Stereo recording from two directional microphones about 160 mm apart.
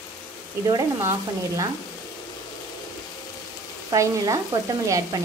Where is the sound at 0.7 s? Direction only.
20° right (ahead or behind).